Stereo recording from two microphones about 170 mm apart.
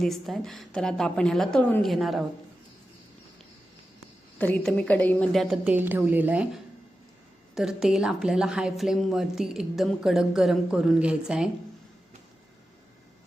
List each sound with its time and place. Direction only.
0.0 s speech: centre (ahead or behind)
4.4 s a woman's voice: 10° left (ahead or behind)
5.6 s a woman's voice: 10° right (ahead or behind)